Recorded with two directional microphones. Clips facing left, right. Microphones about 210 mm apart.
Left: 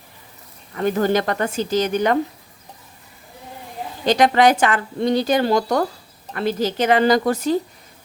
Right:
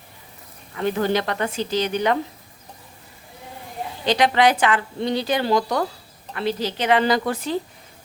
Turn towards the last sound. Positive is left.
turn(degrees=40)  # may be behind; listen again after turning